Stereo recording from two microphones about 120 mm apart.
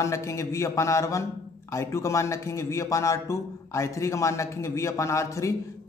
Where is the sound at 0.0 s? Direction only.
25° left (ahead or behind).